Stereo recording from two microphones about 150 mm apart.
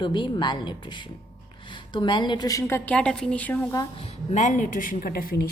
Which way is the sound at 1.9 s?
30° left (ahead or behind).